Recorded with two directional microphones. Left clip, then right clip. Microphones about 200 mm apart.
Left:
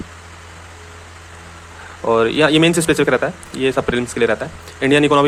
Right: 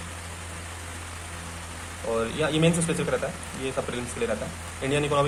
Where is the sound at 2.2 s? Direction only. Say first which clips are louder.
Left 12 dB; 40° left (ahead or behind).